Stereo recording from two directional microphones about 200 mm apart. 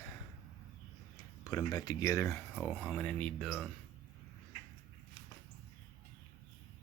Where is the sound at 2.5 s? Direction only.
5° right (ahead or behind).